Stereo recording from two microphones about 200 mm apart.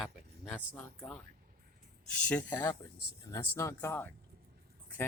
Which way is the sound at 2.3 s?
10° left (ahead or behind).